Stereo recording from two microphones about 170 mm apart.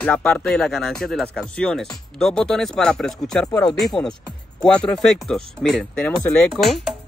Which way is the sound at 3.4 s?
20° left (ahead or behind).